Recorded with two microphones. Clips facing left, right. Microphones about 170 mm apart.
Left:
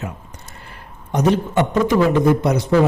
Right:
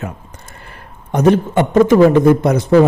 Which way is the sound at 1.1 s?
50° right (ahead or behind).